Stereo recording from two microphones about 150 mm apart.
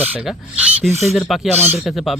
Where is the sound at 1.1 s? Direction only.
Centre (ahead or behind).